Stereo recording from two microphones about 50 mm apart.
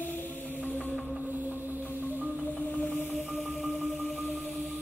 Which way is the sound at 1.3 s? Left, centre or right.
Right.